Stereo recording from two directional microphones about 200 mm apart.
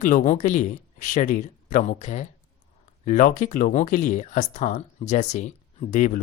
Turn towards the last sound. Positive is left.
turn(degrees=35)  # may be behind; listen again after turning